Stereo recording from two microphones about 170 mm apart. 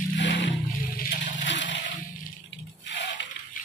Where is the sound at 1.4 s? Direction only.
90° left.